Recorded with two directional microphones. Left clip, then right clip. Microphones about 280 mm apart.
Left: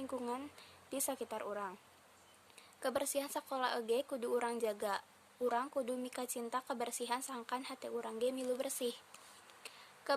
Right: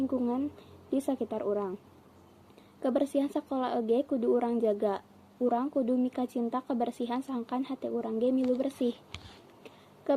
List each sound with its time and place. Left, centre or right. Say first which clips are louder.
0.1 s a woman's voice: right 10 dB; centre
2.8 s a woman's voice: right 9 dB; centre